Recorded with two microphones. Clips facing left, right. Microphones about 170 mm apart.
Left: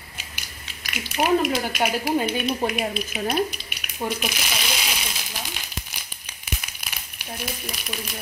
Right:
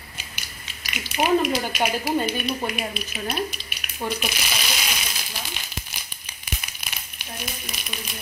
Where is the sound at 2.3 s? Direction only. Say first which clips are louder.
Left 3 dB; 15° left (ahead or behind).